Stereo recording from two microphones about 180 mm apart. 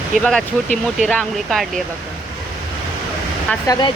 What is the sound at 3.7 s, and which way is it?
Speech, 25° left (ahead or behind).